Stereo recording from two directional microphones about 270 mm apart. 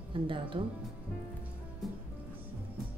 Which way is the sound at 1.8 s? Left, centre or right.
Centre.